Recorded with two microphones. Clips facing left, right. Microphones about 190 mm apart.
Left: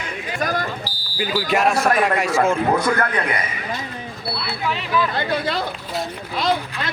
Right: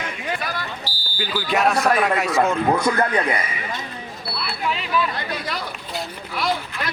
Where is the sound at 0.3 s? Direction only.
45° left (ahead or behind).